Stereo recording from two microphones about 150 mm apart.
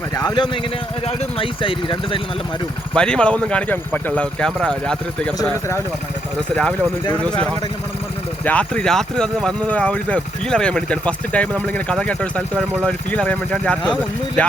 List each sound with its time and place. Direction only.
0.1 s speech: 25° left (ahead or behind)
1.0 s speech: 40° left (ahead or behind)
2.9 s speech: 5° left (ahead or behind)
7.1 s speech: 10° left (ahead or behind)
8.4 s speech: 10° left (ahead or behind)